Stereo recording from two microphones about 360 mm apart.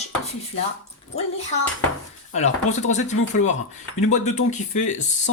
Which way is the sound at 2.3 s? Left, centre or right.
Centre.